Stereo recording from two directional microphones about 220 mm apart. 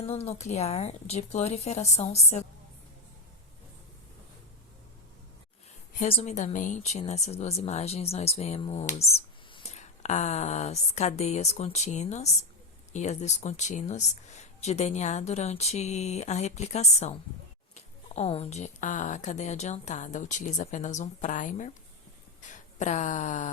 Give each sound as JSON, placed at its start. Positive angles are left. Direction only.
{"t": 0.0, "sound": "speech", "side_deg": 30}
{"t": 6.0, "sound": "speech", "side_deg": 30}